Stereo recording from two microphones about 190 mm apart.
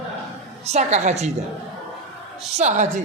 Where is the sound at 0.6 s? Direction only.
35° right (ahead or behind).